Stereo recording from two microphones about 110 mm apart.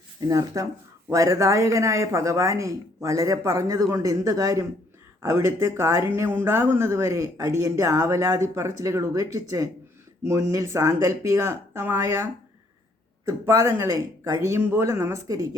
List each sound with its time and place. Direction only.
0.2 s speech: 30° right (ahead or behind)